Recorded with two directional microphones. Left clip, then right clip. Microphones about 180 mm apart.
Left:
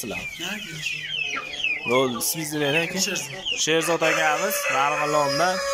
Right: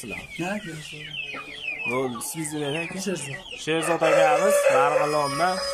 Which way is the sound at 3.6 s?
5° right (ahead or behind).